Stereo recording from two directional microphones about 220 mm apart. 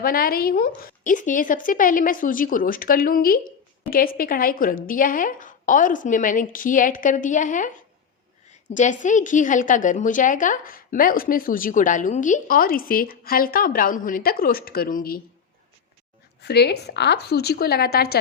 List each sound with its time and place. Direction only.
0.0 s a woman's voice: 40° left (ahead or behind)
8.7 s a woman's voice: 35° left (ahead or behind)
16.4 s a woman's voice: 50° left (ahead or behind)